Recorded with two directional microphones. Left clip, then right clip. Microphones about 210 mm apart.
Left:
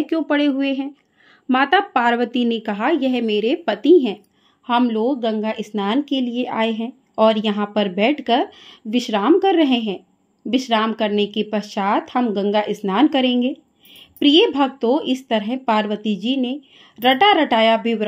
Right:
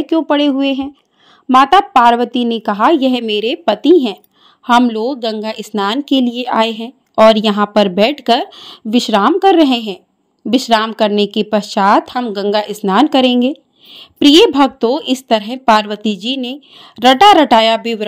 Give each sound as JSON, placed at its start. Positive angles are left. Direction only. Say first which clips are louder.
{"t": 0.0, "sound": "a woman's voice", "louder": "right 6 dB", "side_deg": -20}